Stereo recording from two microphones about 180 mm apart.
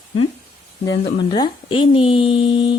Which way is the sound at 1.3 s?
30° left (ahead or behind).